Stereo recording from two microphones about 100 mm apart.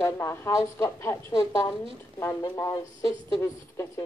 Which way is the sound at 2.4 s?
35° left (ahead or behind).